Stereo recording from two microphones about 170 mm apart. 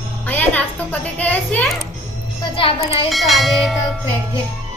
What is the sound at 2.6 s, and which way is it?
Speech, 30° left (ahead or behind).